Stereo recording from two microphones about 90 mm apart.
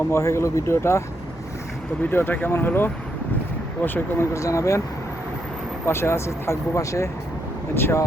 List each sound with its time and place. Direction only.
0.1 s speech: 35° left (ahead or behind)
2.0 s speech: 20° left (ahead or behind)
4.4 s speech: 35° left (ahead or behind)
5.8 s speech: 30° left (ahead or behind)